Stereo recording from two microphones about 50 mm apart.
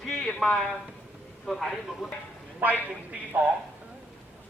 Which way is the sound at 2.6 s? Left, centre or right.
Right.